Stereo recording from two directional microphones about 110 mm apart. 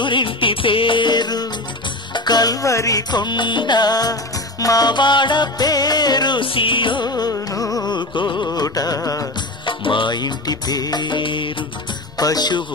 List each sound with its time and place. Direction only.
0.0 s music: 50° left (ahead or behind)
8.5 s music: 35° left (ahead or behind)
9.7 s music: 50° left (ahead or behind)
12.2 s music: 35° left (ahead or behind)